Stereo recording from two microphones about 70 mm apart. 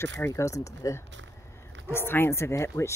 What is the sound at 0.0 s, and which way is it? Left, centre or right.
Speech, left.